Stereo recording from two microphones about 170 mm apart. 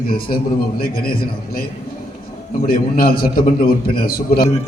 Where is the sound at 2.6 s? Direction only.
55° left (ahead or behind).